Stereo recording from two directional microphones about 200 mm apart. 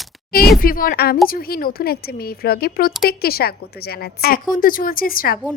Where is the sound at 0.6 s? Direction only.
45° left (ahead or behind).